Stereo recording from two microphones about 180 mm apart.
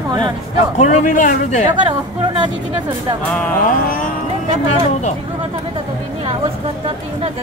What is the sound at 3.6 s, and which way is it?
Speech, 50° left (ahead or behind).